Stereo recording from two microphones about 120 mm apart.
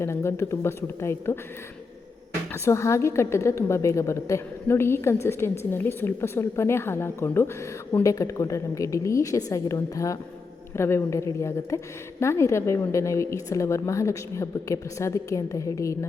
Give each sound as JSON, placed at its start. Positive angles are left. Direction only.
{"t": 0.0, "sound": "a woman's voice", "side_deg": 25}
{"t": 2.5, "sound": "a woman's voice", "side_deg": 25}